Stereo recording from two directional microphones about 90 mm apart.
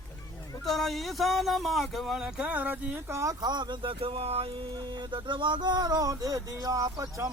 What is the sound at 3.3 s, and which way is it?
Speech, 50° right (ahead or behind).